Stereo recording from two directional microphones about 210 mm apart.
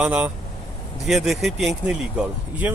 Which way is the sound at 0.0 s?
5° right (ahead or behind).